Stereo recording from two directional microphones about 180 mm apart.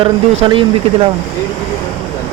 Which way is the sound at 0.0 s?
30° right (ahead or behind).